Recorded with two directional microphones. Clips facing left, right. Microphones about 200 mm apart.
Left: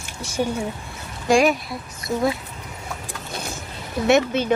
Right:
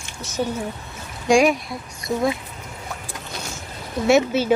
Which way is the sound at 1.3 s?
Centre (ahead or behind).